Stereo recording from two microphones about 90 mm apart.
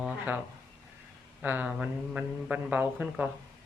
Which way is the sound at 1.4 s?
15° right (ahead or behind).